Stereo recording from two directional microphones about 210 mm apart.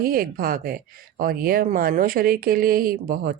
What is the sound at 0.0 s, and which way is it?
Speech, 45° right (ahead or behind).